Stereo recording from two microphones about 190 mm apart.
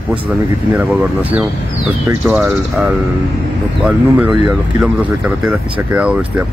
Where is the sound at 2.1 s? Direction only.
10° right (ahead or behind).